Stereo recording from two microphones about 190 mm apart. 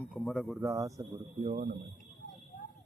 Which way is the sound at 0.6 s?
15° right (ahead or behind).